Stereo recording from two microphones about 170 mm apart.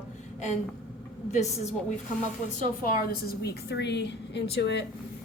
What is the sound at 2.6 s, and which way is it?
A woman's voice, 55° left (ahead or behind).